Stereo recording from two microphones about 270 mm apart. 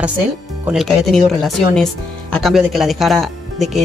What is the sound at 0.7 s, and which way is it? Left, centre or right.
Speech, centre.